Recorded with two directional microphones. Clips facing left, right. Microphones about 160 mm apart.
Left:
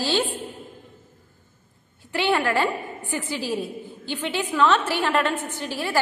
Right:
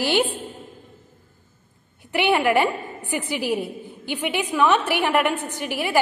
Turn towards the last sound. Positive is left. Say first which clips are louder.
# right 3 dB
turn(degrees=-15)  # may be behind; listen again after turning